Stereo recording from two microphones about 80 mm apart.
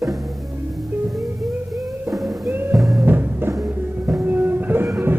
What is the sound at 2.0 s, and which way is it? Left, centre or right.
Music, centre.